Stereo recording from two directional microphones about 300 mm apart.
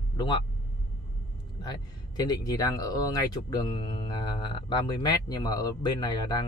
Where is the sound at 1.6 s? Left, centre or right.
Centre.